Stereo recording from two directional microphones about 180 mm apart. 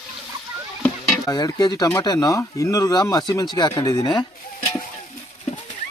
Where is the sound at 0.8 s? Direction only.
20° left (ahead or behind).